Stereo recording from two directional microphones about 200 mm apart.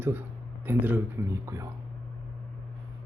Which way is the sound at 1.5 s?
15° right (ahead or behind).